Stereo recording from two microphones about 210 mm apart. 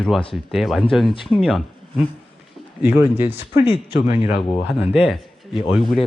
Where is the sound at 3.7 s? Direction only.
25° left (ahead or behind).